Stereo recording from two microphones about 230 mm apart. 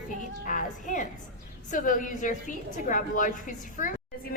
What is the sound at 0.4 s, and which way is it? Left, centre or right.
Music, left.